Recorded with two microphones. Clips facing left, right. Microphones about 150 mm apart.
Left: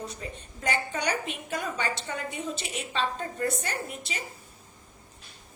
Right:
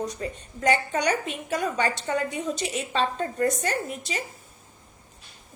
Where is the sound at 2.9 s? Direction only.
45° right (ahead or behind).